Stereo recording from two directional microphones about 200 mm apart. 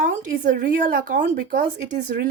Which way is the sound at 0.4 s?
45° right (ahead or behind).